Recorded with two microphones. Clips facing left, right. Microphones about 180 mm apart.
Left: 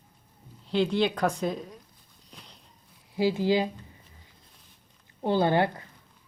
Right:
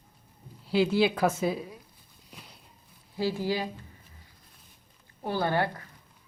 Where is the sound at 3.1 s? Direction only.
20° left (ahead or behind).